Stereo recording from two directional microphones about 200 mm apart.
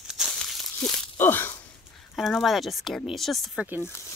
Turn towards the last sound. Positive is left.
turn(degrees=0)  # may be behind; listen again after turning